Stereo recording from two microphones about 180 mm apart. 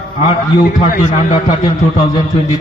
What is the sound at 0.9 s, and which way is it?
Speech, 45° left (ahead or behind).